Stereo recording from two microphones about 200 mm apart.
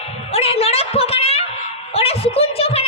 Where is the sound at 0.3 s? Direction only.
30° left (ahead or behind).